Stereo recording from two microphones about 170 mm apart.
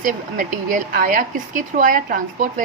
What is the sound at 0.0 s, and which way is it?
Speech, 50° right (ahead or behind).